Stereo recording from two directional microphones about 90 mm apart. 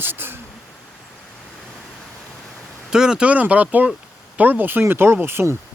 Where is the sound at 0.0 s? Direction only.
25° right (ahead or behind).